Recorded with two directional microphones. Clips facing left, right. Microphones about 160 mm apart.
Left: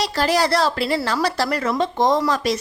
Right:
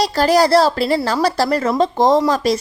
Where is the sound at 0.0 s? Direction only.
40° right (ahead or behind).